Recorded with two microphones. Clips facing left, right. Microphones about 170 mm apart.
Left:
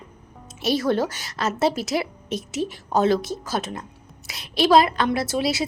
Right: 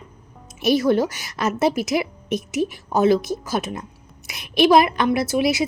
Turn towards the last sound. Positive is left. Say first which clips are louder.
# right 4 dB
turn(degrees=-15)  # may be behind; listen again after turning